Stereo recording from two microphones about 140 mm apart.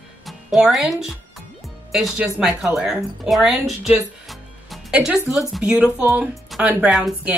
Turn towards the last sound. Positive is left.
turn(degrees=-5)  # may be behind; listen again after turning